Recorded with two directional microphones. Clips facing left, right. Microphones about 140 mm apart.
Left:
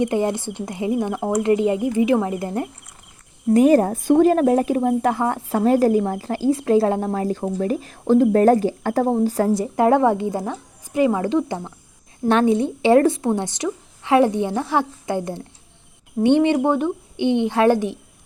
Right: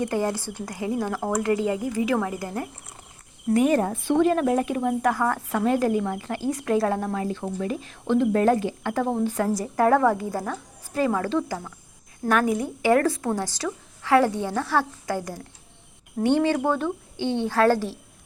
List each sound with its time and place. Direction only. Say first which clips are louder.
0.0 s a woman's voice: left 5 dB; 20° left (ahead or behind)
3.5 s a woman's voice: left 6 dB; 35° left (ahead or behind); by 18.0 s 20° left (ahead or behind)